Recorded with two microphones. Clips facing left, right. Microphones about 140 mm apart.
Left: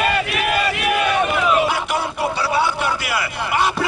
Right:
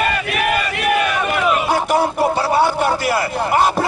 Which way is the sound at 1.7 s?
45° right (ahead or behind).